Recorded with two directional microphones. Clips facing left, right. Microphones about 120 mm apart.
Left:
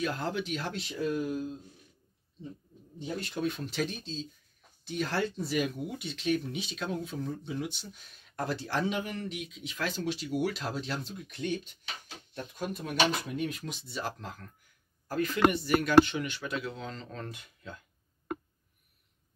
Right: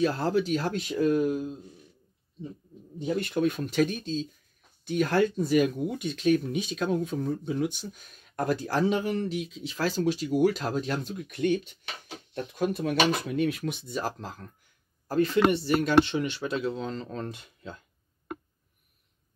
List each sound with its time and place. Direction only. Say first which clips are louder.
0.0 s speech: right 7 dB; 35° right (ahead or behind); by 1.5 s 50° right (ahead or behind)
3.2 s speech: right 6 dB; 55° right (ahead or behind)
12.5 s speech: right 5 dB; 75° right (ahead or behind); by 17.7 s 25° right (ahead or behind)